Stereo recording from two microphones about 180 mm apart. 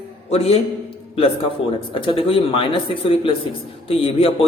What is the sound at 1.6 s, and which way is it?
A man's voice, 30° left (ahead or behind).